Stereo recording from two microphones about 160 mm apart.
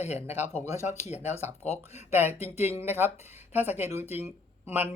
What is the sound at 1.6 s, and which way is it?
Speech, 40° left (ahead or behind).